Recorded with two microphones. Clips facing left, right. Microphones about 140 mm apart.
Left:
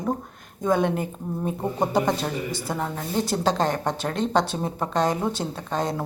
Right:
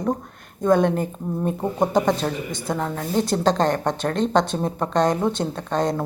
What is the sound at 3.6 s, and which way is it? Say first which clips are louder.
Speech: right 4 dB; 50° right (ahead or behind).